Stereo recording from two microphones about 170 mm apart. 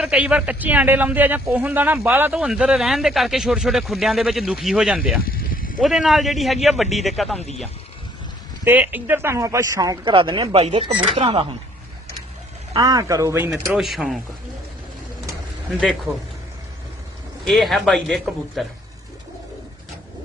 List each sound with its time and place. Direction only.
0.0 s a man's voice: 5° right (ahead or behind)
5.2 s snake: 60° left (ahead or behind)
5.8 s a man's voice: centre (ahead or behind)
7.3 s speech: 40° left (ahead or behind)
8.6 s speech: 10° right (ahead or behind); by 11.4 s 35° right (ahead or behind)
12.7 s speech: 20° right (ahead or behind)
13.5 s a man's voice: centre (ahead or behind)
15.8 s a man's voice: centre (ahead or behind)
17.4 s a man's voice: centre (ahead or behind)